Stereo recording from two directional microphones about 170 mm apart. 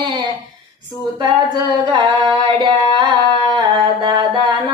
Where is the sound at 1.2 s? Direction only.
25° right (ahead or behind).